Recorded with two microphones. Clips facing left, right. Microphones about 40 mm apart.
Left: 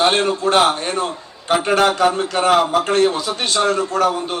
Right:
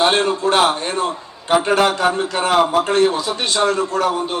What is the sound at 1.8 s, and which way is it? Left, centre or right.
A man's voice, right.